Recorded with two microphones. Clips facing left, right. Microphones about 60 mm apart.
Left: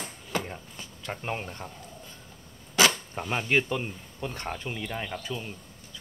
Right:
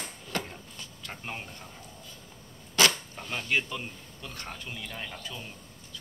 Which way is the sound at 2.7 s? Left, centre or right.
Centre.